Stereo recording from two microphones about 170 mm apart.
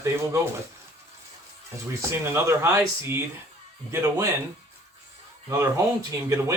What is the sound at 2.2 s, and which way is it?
Speech, 15° right (ahead or behind).